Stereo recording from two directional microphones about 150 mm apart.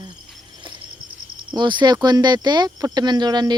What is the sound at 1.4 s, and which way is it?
Speech, 30° right (ahead or behind).